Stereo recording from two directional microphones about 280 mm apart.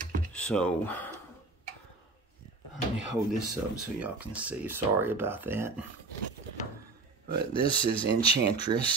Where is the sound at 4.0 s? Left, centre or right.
Centre.